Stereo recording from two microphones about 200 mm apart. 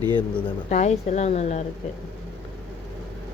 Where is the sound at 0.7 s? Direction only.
35° left (ahead or behind).